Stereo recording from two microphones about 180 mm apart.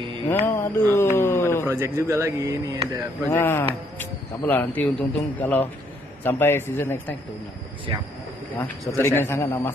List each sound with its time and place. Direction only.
0.5 s speech: 15° left (ahead or behind)
1.7 s speech: 15° right (ahead or behind)
3.3 s speech: 15° left (ahead or behind)
8.5 s speech: 15° left (ahead or behind)